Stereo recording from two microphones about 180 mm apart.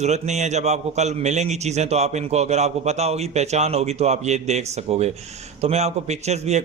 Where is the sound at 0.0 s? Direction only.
40° right (ahead or behind).